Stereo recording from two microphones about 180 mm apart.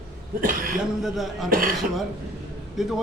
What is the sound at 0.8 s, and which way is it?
Speech, centre (ahead or behind).